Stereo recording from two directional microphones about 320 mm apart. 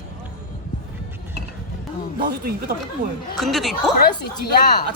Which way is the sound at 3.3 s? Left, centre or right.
Centre.